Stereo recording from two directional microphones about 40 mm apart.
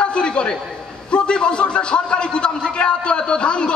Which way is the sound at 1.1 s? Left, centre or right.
Left.